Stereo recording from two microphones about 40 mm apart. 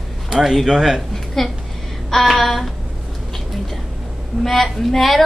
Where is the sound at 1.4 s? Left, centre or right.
Centre.